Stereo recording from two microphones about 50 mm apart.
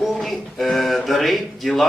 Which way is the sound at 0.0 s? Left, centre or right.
Centre.